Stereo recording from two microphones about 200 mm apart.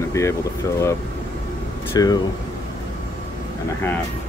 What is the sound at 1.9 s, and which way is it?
Speech, 20° left (ahead or behind).